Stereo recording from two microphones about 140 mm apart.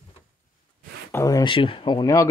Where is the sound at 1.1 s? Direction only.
20° left (ahead or behind).